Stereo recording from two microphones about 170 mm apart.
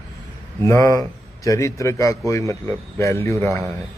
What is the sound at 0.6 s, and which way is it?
A man's voice, 20° left (ahead or behind).